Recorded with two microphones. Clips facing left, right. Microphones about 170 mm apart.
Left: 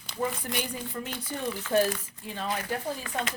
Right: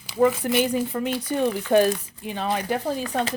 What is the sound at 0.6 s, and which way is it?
Speech, 80° right.